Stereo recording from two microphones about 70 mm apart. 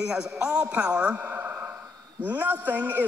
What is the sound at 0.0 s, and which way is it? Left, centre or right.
A man's voice, centre.